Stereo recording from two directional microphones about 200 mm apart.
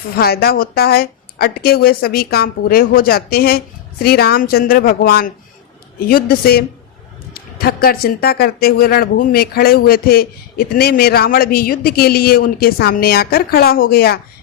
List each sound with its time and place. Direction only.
0.2 s speech: 50° left (ahead or behind)